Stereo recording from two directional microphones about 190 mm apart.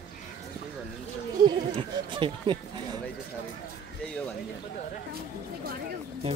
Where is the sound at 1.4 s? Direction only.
25° right (ahead or behind).